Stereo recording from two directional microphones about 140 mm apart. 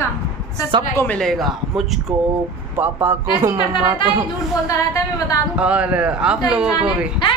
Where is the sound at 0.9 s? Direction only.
10° left (ahead or behind).